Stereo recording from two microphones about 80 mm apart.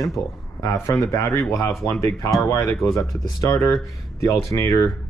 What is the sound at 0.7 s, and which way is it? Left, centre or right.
Speech, left.